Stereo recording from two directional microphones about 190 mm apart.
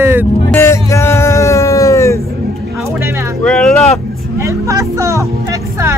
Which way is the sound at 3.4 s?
5° left (ahead or behind).